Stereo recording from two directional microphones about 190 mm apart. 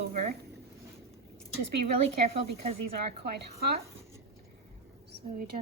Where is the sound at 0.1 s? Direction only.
40° right (ahead or behind).